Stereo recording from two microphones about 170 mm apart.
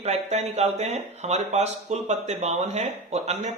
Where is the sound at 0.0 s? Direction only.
40° right (ahead or behind).